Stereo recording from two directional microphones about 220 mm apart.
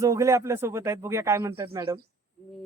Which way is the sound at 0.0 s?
15° right (ahead or behind).